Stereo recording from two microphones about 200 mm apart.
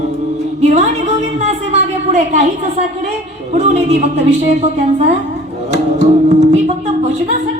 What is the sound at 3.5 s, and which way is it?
A woman's voice, 30° right (ahead or behind).